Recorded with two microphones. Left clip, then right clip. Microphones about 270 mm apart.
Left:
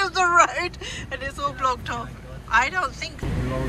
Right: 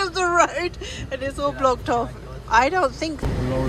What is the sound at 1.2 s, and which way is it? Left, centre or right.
Speech, centre.